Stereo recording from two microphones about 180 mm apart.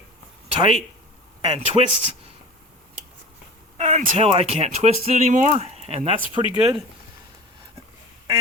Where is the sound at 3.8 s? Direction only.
40° right (ahead or behind).